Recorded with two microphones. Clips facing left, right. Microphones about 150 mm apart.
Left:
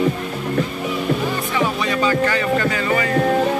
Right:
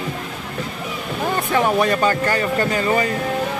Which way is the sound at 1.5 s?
50° right (ahead or behind).